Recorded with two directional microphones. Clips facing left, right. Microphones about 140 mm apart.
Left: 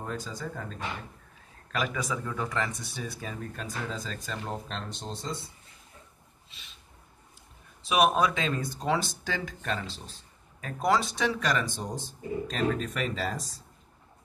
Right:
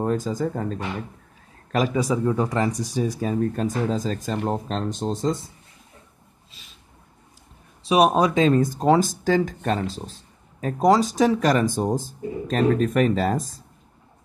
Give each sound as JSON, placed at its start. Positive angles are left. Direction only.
{"t": 0.0, "sound": "speech", "side_deg": -45}
{"t": 7.8, "sound": "speech", "side_deg": -35}